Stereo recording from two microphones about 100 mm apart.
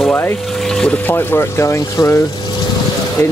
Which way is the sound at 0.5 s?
5° left (ahead or behind).